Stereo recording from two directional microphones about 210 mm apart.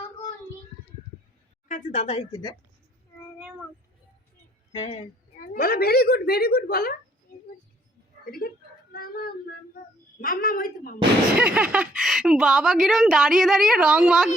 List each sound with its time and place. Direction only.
1.6 s a woman's voice: 35° left (ahead or behind)
4.7 s speech: 30° left (ahead or behind)
5.5 s a woman's voice: 45° left (ahead or behind)
8.2 s speech: 45° left (ahead or behind)
8.9 s music: 45° left (ahead or behind)
10.2 s a woman's voice: 45° left (ahead or behind)
11.3 s speech: 5° right (ahead or behind)